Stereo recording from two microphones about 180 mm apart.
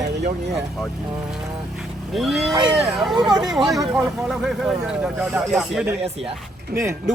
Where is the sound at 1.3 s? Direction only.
Centre (ahead or behind).